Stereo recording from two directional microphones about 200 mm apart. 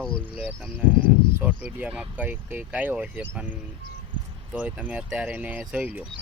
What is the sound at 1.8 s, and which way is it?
Speech, 5° right (ahead or behind).